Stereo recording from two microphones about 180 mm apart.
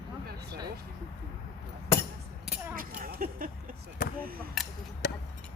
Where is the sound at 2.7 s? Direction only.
50° right (ahead or behind).